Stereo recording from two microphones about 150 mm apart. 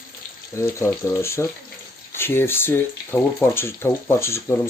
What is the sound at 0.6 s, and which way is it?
Speech, 20° left (ahead or behind).